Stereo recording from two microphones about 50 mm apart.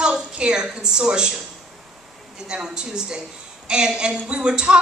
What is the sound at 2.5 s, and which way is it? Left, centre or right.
A woman's voice, centre.